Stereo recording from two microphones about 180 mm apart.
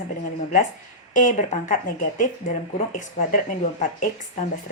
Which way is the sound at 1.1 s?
45° left (ahead or behind).